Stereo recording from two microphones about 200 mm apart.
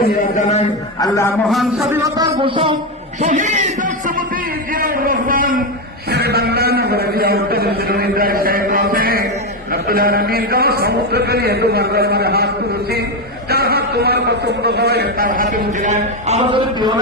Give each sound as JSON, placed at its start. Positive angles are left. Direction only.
{"t": 0.3, "sound": "a man's voice", "side_deg": 35}
{"t": 0.9, "sound": "a man's voice", "side_deg": 15}
{"t": 1.5, "sound": "a man's voice", "side_deg": 0}
{"t": 1.9, "sound": "a man's voice", "side_deg": -15}
{"t": 2.3, "sound": "a man's voice", "side_deg": -25}
{"t": 3.2, "sound": "a sound", "side_deg": -40}
{"t": 9.7, "sound": "a man's voice", "side_deg": -50}
{"t": 13.5, "sound": "a man's voice", "side_deg": -50}